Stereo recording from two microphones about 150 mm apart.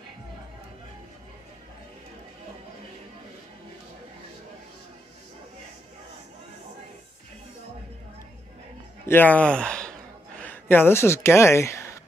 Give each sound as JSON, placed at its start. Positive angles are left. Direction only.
{"t": 9.0, "sound": "speech", "side_deg": 15}